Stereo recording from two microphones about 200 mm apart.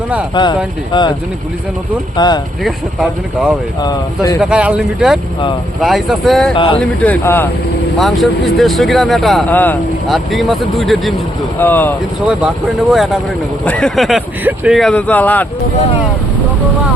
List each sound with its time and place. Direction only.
0.4 s speech: 20° left (ahead or behind)
2.1 s speech: 20° left (ahead or behind)
2.6 s speech: centre (ahead or behind)
3.8 s speech: 20° left (ahead or behind)
4.4 s speech: 5° right (ahead or behind)
12.9 s speech: centre (ahead or behind)